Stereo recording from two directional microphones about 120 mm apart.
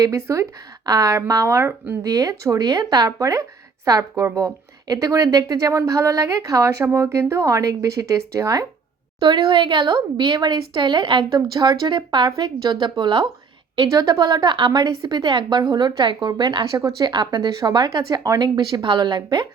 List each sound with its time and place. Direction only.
0.0 s speech: 25° right (ahead or behind)
9.2 s a woman's voice: 40° right (ahead or behind)